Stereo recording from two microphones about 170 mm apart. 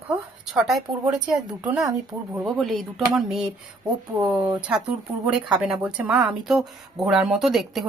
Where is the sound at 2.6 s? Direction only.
Centre (ahead or behind).